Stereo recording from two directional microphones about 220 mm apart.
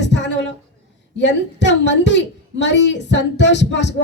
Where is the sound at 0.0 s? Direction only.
55° left (ahead or behind).